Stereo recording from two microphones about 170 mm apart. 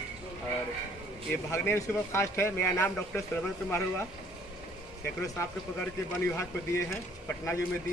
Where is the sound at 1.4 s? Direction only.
15° left (ahead or behind).